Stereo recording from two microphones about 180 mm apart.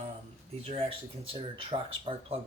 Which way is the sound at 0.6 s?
30° right (ahead or behind).